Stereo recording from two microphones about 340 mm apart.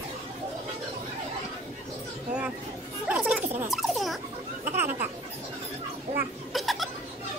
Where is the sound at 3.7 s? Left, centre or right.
Centre.